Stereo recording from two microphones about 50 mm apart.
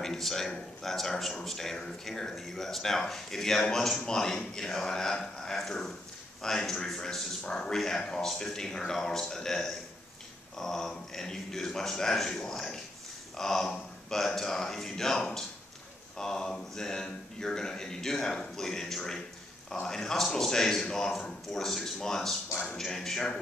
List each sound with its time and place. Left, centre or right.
0.0 s speech: centre
22.5 s music: left
22.8 s speech: centre